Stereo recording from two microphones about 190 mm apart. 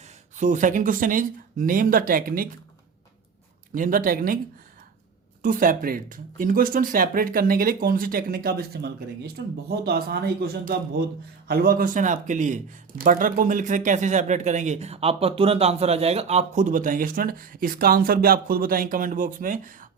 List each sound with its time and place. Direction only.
0.0 s speech: 40° right (ahead or behind)
3.8 s speech: 45° right (ahead or behind)
5.4 s speech: 45° right (ahead or behind)